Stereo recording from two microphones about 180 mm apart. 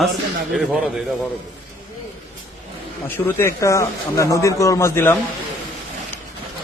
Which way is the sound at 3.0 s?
10° left (ahead or behind).